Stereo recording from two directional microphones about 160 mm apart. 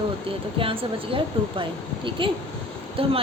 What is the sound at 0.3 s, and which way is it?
A woman's voice, 35° right (ahead or behind).